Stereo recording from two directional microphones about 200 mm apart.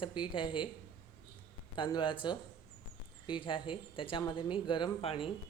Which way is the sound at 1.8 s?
25° left (ahead or behind).